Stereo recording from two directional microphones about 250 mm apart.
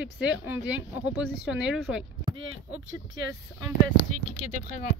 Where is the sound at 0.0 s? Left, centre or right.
Centre.